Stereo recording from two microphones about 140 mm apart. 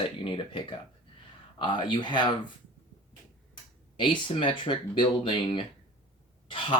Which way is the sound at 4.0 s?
35° left (ahead or behind).